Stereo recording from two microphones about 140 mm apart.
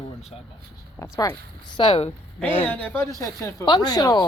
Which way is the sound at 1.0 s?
25° left (ahead or behind).